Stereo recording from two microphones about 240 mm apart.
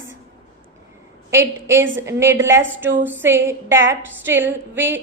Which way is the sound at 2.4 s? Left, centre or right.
Right.